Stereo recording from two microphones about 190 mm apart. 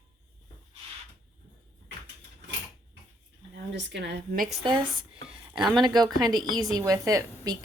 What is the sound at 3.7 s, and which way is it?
Speech, 65° right (ahead or behind).